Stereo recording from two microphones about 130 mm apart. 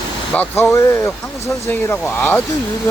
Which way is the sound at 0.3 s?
15° left (ahead or behind).